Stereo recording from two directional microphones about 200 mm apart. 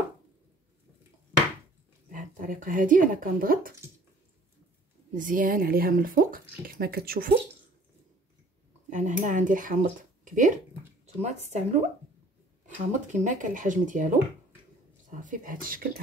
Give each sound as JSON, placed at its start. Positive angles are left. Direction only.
{"t": 2.0, "sound": "speech", "side_deg": -40}
{"t": 5.1, "sound": "speech", "side_deg": -40}
{"t": 8.9, "sound": "speech", "side_deg": -40}